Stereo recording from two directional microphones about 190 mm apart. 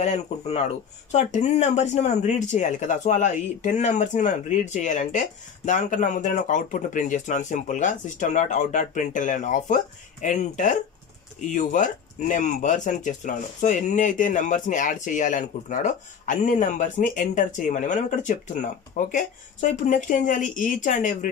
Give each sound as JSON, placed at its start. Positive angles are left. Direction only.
{"t": 0.0, "sound": "speech", "side_deg": 35}